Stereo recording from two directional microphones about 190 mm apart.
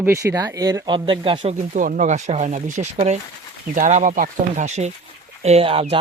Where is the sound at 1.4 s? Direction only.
40° right (ahead or behind).